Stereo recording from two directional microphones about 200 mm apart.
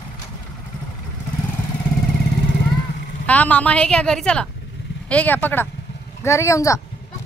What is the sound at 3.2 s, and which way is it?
A woman's voice, 5° left (ahead or behind).